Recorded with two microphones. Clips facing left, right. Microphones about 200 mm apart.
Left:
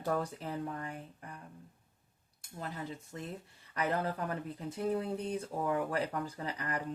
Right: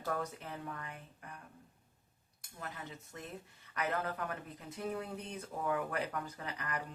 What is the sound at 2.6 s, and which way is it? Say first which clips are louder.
Speech: left 5 dB; 30° left (ahead or behind).